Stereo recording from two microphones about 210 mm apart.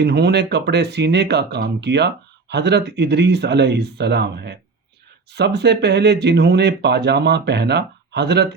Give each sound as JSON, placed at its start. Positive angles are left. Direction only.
{"t": 0.0, "sound": "speech", "side_deg": -50}